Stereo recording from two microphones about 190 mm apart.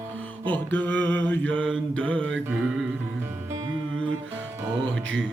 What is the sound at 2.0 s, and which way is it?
Music, 5° left (ahead or behind).